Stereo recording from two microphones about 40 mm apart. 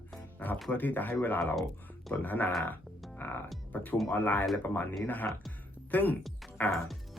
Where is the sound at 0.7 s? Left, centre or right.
Left.